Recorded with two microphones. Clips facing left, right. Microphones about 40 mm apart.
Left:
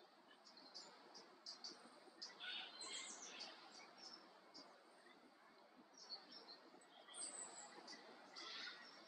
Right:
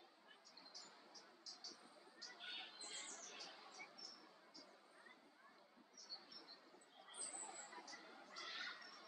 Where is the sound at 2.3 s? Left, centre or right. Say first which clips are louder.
Left 2 dB; centre.